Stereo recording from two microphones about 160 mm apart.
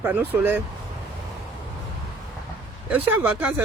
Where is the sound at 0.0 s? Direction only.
10° right (ahead or behind).